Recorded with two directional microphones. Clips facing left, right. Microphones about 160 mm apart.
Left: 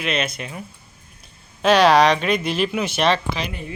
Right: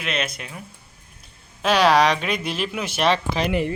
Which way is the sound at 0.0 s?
Centre (ahead or behind).